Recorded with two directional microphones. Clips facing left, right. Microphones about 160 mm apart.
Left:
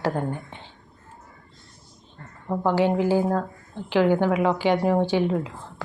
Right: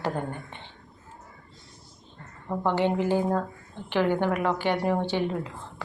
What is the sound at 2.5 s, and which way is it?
A woman's voice, 5° left (ahead or behind).